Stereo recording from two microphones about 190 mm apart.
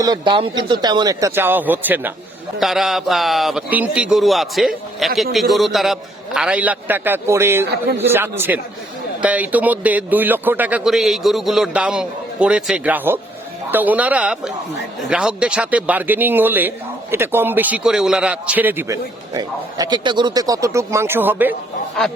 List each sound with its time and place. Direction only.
0.0 s a man's voice: 25° right (ahead or behind)